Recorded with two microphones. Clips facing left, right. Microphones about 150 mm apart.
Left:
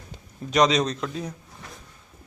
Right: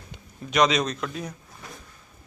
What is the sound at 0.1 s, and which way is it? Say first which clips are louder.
A man's voice: left 3 dB; 35° left (ahead or behind).